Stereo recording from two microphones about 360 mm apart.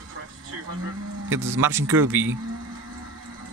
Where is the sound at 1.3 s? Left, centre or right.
Right.